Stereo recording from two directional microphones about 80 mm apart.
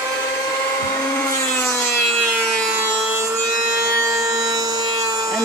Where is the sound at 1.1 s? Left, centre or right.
Centre.